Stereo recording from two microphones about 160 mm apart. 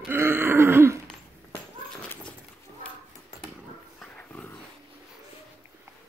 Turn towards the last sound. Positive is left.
turn(degrees=10)  # may be behind; listen again after turning